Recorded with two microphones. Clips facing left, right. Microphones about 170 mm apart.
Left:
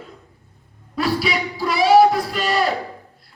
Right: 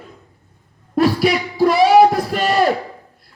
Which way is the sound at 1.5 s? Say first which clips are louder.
Right 2 dB; 45° right (ahead or behind).